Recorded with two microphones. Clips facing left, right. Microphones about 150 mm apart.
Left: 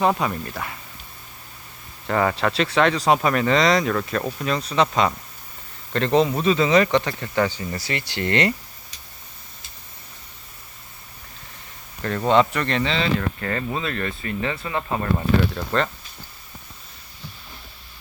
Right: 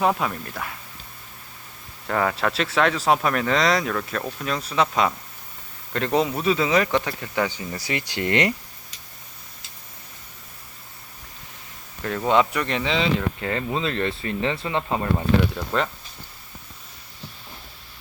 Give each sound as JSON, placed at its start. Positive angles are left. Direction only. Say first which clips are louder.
{"t": 0.0, "sound": "speech", "louder": "left 1 dB", "side_deg": 0}
{"t": 2.0, "sound": "speech", "louder": "left 2 dB", "side_deg": 0}
{"t": 12.0, "sound": "speech", "louder": "left 2 dB", "side_deg": -5}